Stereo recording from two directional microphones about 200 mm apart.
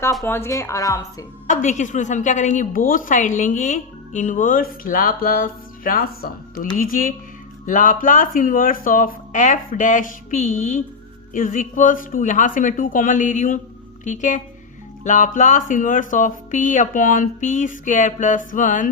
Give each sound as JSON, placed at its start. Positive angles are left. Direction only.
{"t": 0.2, "sound": "speech", "side_deg": 10}
{"t": 1.5, "sound": "a woman's voice", "side_deg": 40}